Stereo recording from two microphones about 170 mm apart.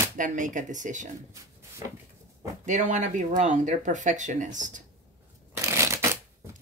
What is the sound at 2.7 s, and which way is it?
Speech, 45° right (ahead or behind).